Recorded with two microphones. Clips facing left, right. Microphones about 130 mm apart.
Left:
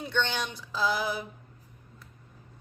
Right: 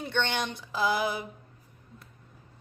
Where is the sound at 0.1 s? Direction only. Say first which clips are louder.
Even; 55° right (ahead or behind).